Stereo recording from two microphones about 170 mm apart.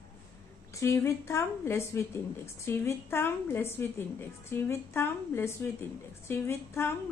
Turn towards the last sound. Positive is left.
turn(degrees=15)  # may be behind; listen again after turning